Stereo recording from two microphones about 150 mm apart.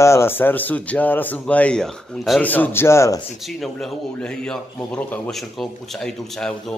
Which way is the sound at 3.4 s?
Centre (ahead or behind).